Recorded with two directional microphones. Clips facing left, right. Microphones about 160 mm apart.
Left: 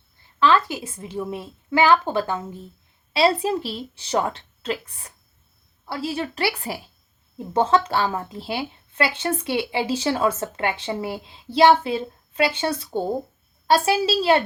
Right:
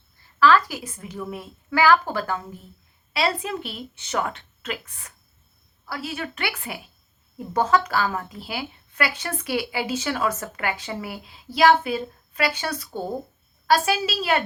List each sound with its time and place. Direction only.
0.3 s speech: 25° left (ahead or behind)